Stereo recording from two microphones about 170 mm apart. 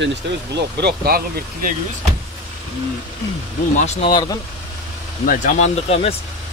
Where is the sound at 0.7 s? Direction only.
70° right (ahead or behind).